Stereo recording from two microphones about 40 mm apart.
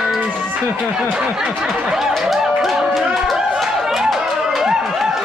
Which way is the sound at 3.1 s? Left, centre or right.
Centre.